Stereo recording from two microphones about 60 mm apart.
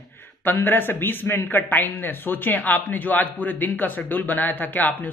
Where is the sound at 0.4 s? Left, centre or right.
Left.